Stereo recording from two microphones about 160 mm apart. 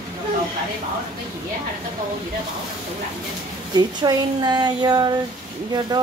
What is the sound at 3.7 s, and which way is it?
Speech, 25° right (ahead or behind).